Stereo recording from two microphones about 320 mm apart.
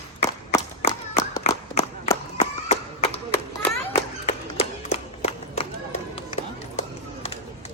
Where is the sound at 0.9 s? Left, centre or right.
Centre.